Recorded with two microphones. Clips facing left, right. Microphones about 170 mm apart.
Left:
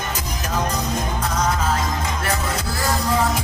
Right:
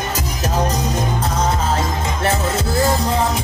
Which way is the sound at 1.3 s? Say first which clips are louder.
Right 1 dB; 30° right (ahead or behind).